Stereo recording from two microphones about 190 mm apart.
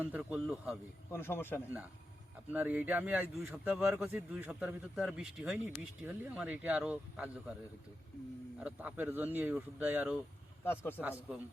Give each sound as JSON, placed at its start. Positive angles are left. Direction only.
{"t": 0.0, "sound": "a man's voice", "side_deg": -5}
{"t": 1.1, "sound": "speech", "side_deg": 10}
{"t": 2.5, "sound": "speech", "side_deg": -10}
{"t": 8.5, "sound": "speech", "side_deg": -10}
{"t": 10.6, "sound": "a man's voice", "side_deg": 10}